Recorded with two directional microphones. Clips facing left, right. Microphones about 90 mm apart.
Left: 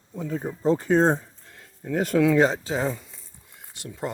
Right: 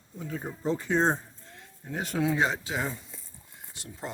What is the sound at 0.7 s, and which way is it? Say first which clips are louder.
Speech: left 5 dB; 50° left (ahead or behind).